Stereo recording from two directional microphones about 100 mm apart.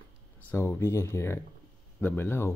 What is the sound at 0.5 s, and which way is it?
Speech, 25° left (ahead or behind).